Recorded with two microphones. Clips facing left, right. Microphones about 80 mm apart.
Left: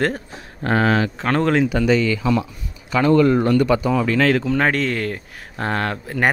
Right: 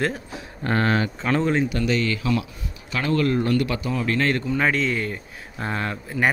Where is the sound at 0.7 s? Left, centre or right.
Left.